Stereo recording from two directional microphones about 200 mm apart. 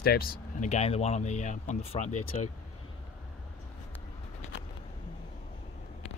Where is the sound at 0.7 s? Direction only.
30° left (ahead or behind).